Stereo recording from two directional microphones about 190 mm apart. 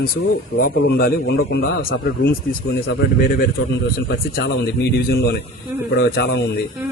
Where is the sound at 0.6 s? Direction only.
50° left (ahead or behind).